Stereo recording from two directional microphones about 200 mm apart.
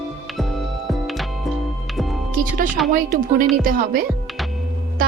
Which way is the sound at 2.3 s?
45° right (ahead or behind).